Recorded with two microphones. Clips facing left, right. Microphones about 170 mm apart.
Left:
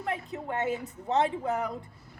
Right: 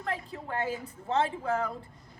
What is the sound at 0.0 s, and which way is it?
A woman's voice, 20° left (ahead or behind).